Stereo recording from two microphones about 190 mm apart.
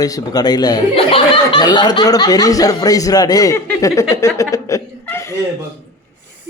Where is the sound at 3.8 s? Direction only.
15° left (ahead or behind).